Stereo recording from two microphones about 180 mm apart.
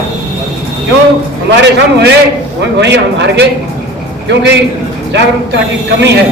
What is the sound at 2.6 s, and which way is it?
A man's voice, 75° right (ahead or behind).